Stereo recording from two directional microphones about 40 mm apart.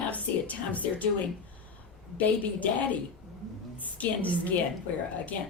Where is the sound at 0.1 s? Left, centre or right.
Left.